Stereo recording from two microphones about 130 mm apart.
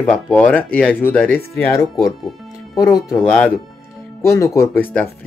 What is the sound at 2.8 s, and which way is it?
Speech, 25° left (ahead or behind).